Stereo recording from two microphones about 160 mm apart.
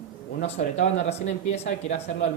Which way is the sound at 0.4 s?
40° left (ahead or behind).